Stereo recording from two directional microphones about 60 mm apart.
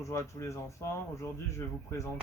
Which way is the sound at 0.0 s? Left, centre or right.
Left.